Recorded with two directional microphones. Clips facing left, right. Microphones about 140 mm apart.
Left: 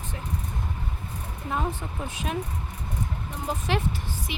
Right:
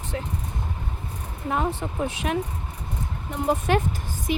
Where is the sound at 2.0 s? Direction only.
75° right (ahead or behind).